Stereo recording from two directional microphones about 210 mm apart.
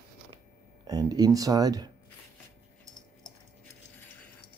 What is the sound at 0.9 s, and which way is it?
Speech, 20° right (ahead or behind).